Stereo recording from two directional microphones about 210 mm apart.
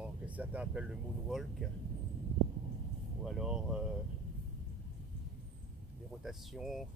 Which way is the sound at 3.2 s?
Centre (ahead or behind).